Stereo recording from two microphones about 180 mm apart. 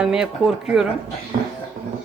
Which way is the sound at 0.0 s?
5° right (ahead or behind).